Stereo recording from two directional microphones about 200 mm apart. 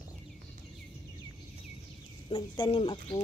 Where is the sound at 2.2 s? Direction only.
25° left (ahead or behind).